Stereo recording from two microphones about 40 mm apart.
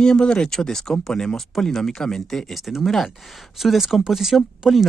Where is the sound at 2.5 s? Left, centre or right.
Centre.